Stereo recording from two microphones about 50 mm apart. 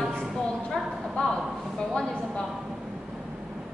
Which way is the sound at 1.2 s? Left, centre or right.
Centre.